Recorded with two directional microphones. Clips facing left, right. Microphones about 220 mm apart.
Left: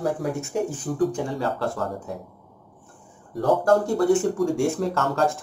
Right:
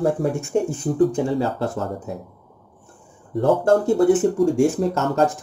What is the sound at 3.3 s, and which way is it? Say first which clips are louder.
Speech: right 3 dB; 25° right (ahead or behind).